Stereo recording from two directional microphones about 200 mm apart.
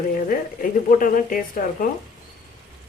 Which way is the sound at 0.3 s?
45° left (ahead or behind).